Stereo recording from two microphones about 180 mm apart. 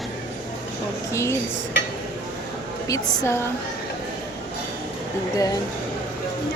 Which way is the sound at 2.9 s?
15° left (ahead or behind).